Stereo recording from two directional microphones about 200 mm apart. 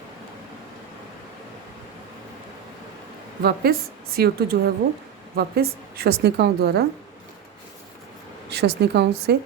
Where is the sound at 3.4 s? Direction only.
50° right (ahead or behind).